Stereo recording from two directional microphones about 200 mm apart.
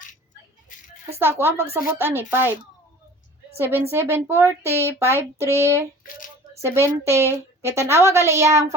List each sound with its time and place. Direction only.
1.2 s a woman's voice: 10° right (ahead or behind)
3.9 s a woman's voice: 10° right (ahead or behind)
6.0 s a sound: 40° left (ahead or behind)
6.6 s a woman's voice: 15° right (ahead or behind)